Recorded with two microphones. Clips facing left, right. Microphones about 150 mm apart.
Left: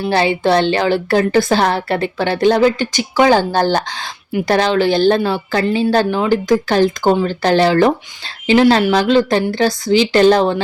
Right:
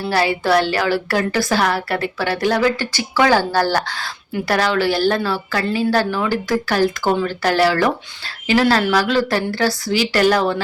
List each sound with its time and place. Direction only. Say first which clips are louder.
0.0 s a woman's voice: left 4 dB; 25° left (ahead or behind)